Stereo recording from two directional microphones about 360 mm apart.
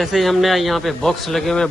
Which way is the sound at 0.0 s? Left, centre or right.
Centre.